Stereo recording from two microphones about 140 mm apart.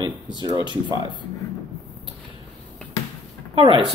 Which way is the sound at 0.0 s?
30° right (ahead or behind).